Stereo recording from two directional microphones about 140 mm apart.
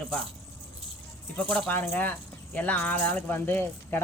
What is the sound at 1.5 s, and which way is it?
Speech, 10° left (ahead or behind).